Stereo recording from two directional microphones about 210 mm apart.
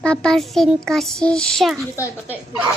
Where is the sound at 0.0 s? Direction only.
5° left (ahead or behind).